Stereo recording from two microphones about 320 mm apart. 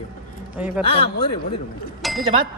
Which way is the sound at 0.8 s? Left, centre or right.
Centre.